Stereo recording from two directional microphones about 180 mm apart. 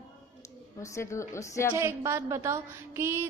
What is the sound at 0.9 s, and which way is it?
Speech, 15° left (ahead or behind).